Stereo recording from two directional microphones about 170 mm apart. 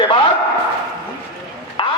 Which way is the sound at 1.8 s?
30° left (ahead or behind).